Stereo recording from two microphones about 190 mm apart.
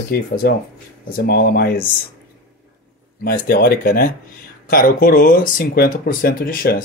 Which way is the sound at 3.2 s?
50° left (ahead or behind).